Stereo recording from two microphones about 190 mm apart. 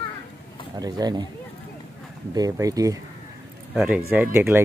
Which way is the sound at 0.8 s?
20° right (ahead or behind).